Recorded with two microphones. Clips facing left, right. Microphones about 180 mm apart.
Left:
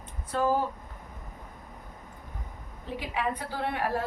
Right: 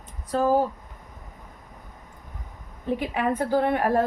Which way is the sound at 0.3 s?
40° right (ahead or behind).